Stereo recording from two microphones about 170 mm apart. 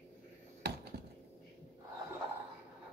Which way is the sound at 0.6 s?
75° right (ahead or behind).